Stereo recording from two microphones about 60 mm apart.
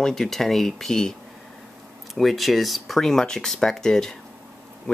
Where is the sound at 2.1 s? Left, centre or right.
Centre.